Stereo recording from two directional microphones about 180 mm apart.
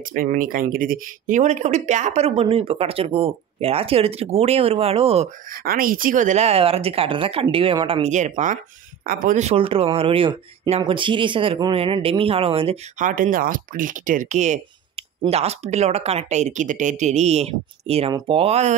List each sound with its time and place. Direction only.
0.1 s speech: 50° right (ahead or behind); by 5.3 s 35° right (ahead or behind)
5.6 s speech: 55° right (ahead or behind); by 12.7 s 30° right (ahead or behind)
13.0 s speech: 50° right (ahead or behind)